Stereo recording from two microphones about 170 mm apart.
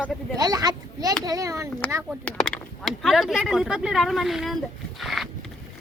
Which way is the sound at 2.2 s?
Centre (ahead or behind).